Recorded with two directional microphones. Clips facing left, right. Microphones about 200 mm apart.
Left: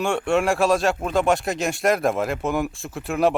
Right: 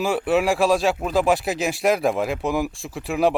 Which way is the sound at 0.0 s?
5° right (ahead or behind).